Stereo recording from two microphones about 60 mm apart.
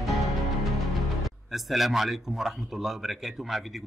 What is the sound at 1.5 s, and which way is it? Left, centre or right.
A man's voice, centre.